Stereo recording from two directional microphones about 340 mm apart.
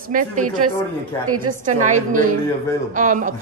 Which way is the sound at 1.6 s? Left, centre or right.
Right.